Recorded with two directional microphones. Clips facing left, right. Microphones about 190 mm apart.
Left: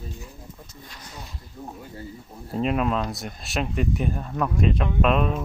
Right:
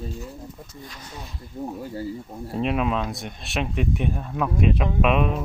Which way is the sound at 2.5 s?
Centre (ahead or behind).